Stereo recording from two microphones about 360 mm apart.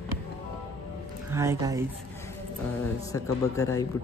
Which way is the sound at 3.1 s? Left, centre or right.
Centre.